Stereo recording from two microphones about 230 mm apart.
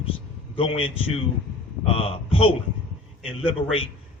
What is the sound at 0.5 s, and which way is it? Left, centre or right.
A man's voice, left.